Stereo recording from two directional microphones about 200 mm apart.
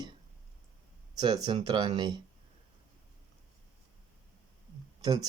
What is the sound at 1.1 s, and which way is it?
Speech, 20° right (ahead or behind).